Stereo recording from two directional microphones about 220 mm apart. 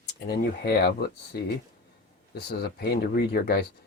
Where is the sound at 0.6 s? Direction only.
45° left (ahead or behind).